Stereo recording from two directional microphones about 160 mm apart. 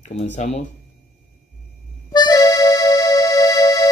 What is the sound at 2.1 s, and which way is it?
Music, 25° left (ahead or behind).